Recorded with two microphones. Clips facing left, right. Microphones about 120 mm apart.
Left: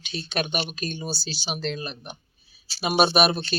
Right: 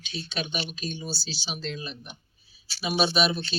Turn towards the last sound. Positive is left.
turn(degrees=65)  # may be behind; listen again after turning